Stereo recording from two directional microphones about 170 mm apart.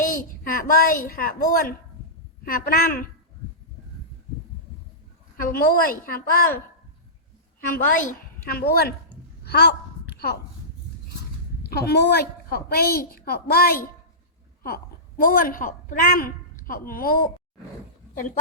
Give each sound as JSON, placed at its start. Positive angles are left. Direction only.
{"t": 0.0, "sound": "a child's voice", "side_deg": 55}
{"t": 5.4, "sound": "a woman's voice", "side_deg": 60}
{"t": 7.7, "sound": "a woman's voice", "side_deg": 50}
{"t": 9.4, "sound": "a sound", "side_deg": 70}
{"t": 11.7, "sound": "a woman's voice", "side_deg": 70}
{"t": 15.2, "sound": "a woman's voice", "side_deg": 55}